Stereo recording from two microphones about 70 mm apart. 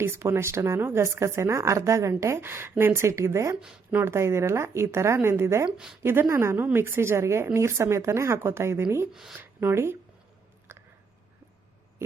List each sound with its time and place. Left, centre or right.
0.0 s speech: right
5.6 s a woman's voice: centre
6.0 s speech: right
9.1 s a woman's voice: centre
9.4 s speech: right
10.7 s a sound: right